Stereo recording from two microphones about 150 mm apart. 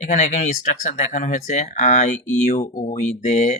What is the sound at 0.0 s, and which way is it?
Speech, 50° left (ahead or behind).